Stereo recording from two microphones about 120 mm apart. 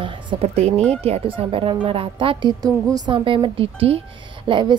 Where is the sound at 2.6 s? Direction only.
30° right (ahead or behind).